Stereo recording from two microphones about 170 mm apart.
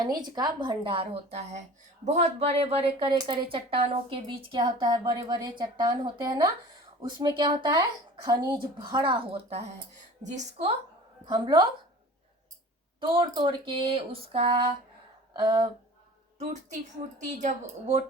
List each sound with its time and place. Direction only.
0.0 s a woman's voice: 25° right (ahead or behind); by 10.7 s 45° right (ahead or behind)
11.3 s speech: 25° right (ahead or behind)
13.0 s speech: 30° right (ahead or behind)
16.4 s a woman's voice: 45° right (ahead or behind)